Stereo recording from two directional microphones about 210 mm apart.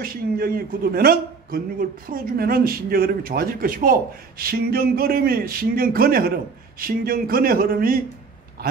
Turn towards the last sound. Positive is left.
turn(degrees=-45)  # may be behind; listen again after turning